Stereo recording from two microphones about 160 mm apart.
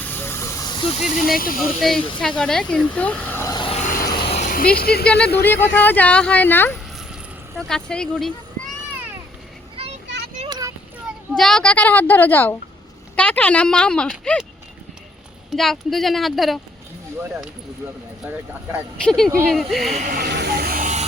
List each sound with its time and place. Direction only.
0.0 s hiss: 15° left (ahead or behind); by 0.9 s 30° left (ahead or behind)
0.9 s speech: 50° left (ahead or behind)
1.5 s speech: centre (ahead or behind)
3.5 s vehicle: 30° left (ahead or behind)
3.8 s vehicle: 55° left (ahead or behind)
4.5 s speech: 70° left (ahead or behind)
5.4 s speech: 15° left (ahead or behind)
7.1 s vehicle: centre (ahead or behind)
10.5 s a sound: 20° right (ahead or behind)
11.0 s a child's voice: 5° left (ahead or behind)
15.4 s speech: centre (ahead or behind)
19.0 s speech: 5° left (ahead or behind)
19.9 s speech: 50° right (ahead or behind)
20.1 s snake: 90° right; by 20.8 s 75° right (ahead or behind)